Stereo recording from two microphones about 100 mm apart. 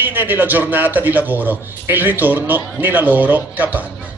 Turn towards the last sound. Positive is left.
turn(degrees=-15)  # may be behind; listen again after turning